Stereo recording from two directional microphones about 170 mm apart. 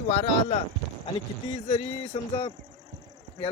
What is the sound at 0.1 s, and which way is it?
Speech, 35° left (ahead or behind).